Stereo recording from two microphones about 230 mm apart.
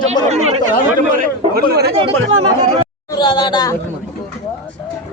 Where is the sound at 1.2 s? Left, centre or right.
Right.